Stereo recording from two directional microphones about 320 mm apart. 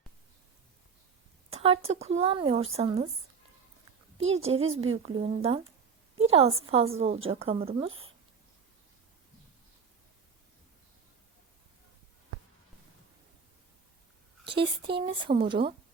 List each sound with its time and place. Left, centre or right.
1.5 s speech: centre
4.2 s speech: right
5.0 s speech: centre
14.4 s speech: centre